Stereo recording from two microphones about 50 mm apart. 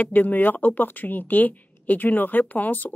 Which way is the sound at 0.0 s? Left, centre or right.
Left.